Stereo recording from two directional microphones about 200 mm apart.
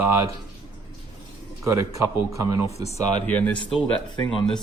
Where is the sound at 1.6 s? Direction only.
15° right (ahead or behind).